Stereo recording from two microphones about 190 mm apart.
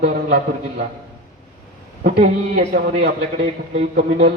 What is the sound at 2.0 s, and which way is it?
A man's voice, 50° right (ahead or behind).